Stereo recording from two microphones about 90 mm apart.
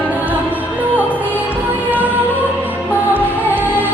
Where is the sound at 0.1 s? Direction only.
20° right (ahead or behind).